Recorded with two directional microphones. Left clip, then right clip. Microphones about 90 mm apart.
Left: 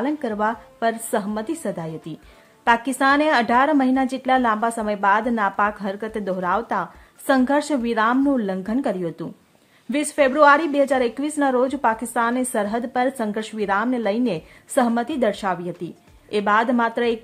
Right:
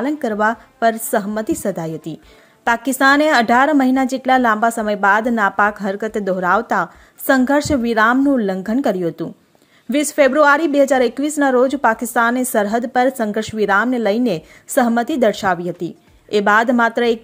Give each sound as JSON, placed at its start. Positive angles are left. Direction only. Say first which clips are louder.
{"t": 0.0, "sound": "a woman's voice", "louder": "right 5 dB", "side_deg": -40}